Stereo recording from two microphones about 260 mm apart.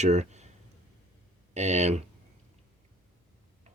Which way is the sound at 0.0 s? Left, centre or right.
Right.